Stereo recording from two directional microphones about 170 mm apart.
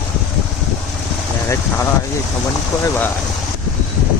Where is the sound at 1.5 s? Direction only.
15° left (ahead or behind).